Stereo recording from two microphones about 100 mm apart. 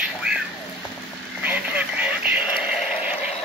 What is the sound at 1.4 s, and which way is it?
Radio, 15° right (ahead or behind).